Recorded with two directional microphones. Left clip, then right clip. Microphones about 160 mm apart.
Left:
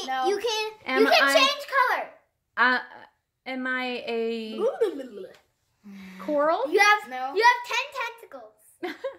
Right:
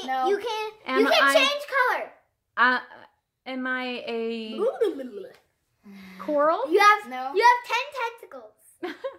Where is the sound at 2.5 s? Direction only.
Centre (ahead or behind).